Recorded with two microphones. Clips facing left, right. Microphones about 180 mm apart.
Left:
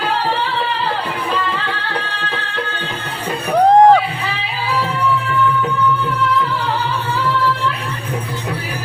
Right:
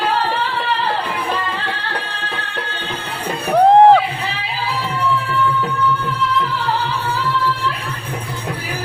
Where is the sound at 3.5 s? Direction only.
Centre (ahead or behind).